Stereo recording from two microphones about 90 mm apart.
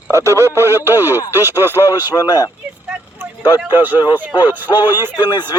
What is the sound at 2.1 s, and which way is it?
Speech, 45° left (ahead or behind).